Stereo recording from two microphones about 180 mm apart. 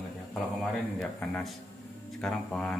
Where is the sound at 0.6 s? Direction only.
5° left (ahead or behind).